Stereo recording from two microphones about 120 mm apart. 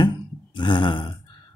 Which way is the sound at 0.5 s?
45° left (ahead or behind).